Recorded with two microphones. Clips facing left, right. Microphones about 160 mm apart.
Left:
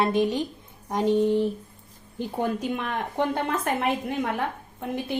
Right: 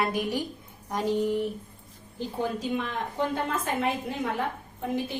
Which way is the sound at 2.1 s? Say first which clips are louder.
Left 3 dB; 55° left (ahead or behind).